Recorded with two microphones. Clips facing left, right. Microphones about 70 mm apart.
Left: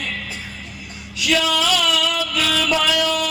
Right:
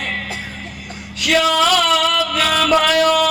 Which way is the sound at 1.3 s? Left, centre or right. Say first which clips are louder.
Right 5 dB; right.